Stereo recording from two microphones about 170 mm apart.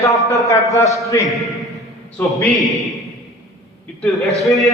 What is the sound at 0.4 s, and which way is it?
Speech, 20° left (ahead or behind).